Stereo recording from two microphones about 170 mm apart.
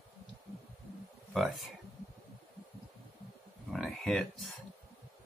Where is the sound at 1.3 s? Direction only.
Centre (ahead or behind).